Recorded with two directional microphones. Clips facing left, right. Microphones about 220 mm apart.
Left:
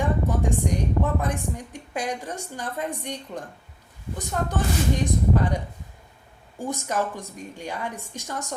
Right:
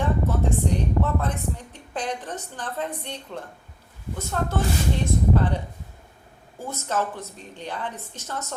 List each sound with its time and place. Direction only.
0.0 s a woman's voice: 15° left (ahead or behind)
6.6 s a woman's voice: 15° left (ahead or behind)